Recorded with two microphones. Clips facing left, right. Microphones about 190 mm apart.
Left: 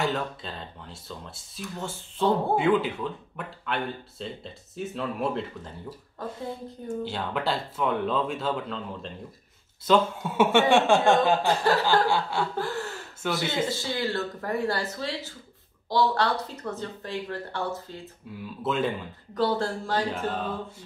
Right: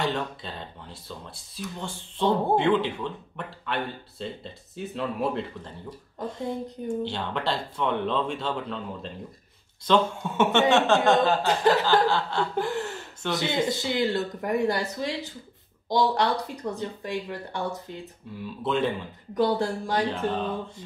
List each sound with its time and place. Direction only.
0.0 s speech: centre (ahead or behind)
7.1 s speech: 5° left (ahead or behind)
9.8 s music: 10° left (ahead or behind)
11.4 s chuckle: 20° right (ahead or behind)
12.1 s music: 10° left (ahead or behind)
12.5 s speech: 20° right (ahead or behind)
18.6 s speech: centre (ahead or behind)
19.3 s speech: 15° right (ahead or behind)
20.1 s music: 5° left (ahead or behind)